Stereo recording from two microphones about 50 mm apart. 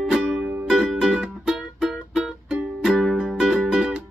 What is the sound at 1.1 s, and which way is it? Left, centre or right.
Music, centre.